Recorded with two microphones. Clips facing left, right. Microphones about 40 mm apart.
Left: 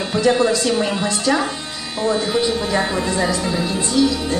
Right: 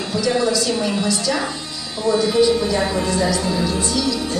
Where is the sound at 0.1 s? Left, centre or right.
Left.